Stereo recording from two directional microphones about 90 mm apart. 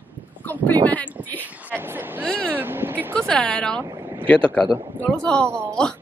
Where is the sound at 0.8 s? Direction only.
15° left (ahead or behind).